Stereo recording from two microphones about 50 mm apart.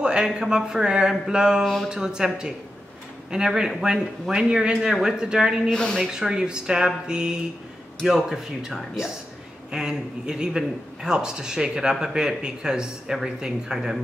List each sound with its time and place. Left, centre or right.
0.0 s a man's voice: centre
1.6 s speech: centre
1.9 s a man's voice: centre
5.7 s speech: centre
6.0 s a man's voice: centre